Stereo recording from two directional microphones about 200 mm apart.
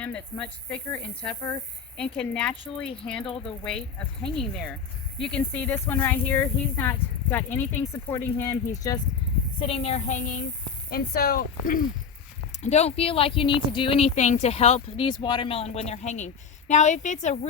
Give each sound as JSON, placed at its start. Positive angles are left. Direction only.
{"t": 0.0, "sound": "speech", "side_deg": 5}
{"t": 9.6, "sound": "speech", "side_deg": 30}
{"t": 10.8, "sound": "speech", "side_deg": 50}
{"t": 12.6, "sound": "speech", "side_deg": 35}